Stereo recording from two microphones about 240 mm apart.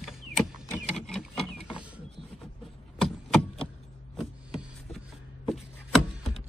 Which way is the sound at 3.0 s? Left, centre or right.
Centre.